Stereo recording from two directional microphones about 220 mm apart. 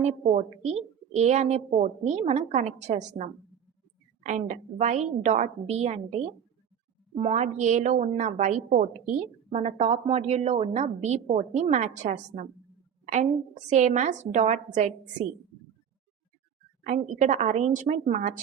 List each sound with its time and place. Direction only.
0.0 s a woman's voice: 30° right (ahead or behind)
4.3 s a woman's voice: 35° right (ahead or behind)
13.7 s a woman's voice: 35° right (ahead or behind)
16.8 s a woman's voice: 30° right (ahead or behind)